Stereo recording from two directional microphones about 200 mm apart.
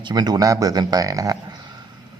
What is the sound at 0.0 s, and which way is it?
A man's voice, 20° right (ahead or behind).